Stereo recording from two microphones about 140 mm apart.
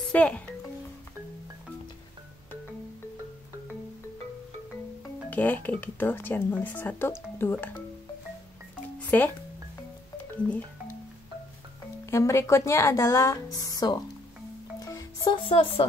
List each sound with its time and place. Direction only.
0.1 s speech: 10° left (ahead or behind)
5.3 s speech: 10° left (ahead or behind)
9.1 s speech: 10° left (ahead or behind)
12.1 s a woman's voice: 20° left (ahead or behind)
14.8 s music: 25° left (ahead or behind); by 15.9 s 40° left (ahead or behind)